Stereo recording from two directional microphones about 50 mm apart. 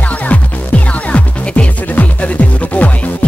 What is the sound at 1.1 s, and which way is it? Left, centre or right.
Music, left.